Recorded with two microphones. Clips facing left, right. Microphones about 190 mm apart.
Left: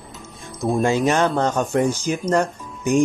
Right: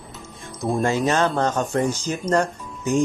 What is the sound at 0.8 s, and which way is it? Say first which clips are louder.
Speech: left 2 dB; 20° left (ahead or behind).